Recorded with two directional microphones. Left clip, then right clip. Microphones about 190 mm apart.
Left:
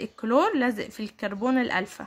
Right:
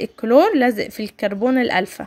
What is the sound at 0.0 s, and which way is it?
A woman's voice, 20° right (ahead or behind).